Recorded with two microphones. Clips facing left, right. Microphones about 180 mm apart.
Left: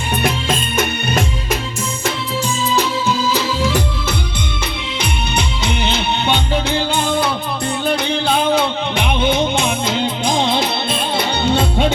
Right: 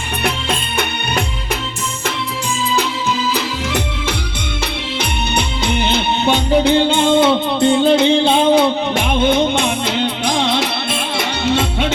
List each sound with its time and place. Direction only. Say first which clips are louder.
5.6 s music: right 4 dB; 55° right (ahead or behind)
6.7 s music: right 6 dB; 25° right (ahead or behind)
9.0 s music: right 1 dB; 55° right (ahead or behind)
10.2 s music: left 1 dB; 80° right
11.2 s music: even; 90° right